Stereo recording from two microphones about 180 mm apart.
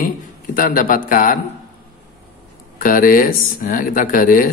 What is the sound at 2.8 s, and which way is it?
A man's voice, 50° left (ahead or behind).